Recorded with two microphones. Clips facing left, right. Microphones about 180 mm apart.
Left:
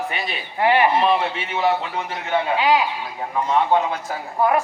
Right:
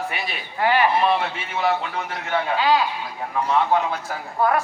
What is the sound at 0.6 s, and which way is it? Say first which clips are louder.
Speech: left 2 dB; 25° left (ahead or behind).